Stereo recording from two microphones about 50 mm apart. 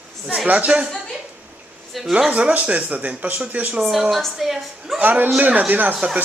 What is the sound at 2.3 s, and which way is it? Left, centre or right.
Speech, right.